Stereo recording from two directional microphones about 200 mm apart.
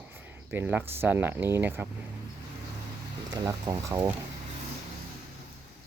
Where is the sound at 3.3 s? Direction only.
15° right (ahead or behind).